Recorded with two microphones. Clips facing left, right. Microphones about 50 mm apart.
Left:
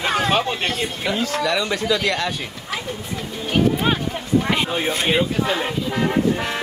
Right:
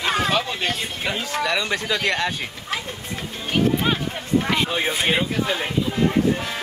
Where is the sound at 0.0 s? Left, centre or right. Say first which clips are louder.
Left 2 dB; left.